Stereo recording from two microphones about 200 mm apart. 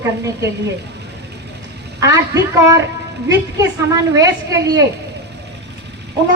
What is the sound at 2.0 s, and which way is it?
A woman's voice, 15° right (ahead or behind).